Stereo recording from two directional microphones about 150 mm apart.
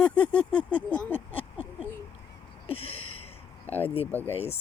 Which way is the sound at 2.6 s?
40° left (ahead or behind).